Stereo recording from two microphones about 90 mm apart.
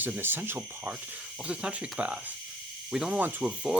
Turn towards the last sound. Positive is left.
turn(degrees=-10)  # may be behind; listen again after turning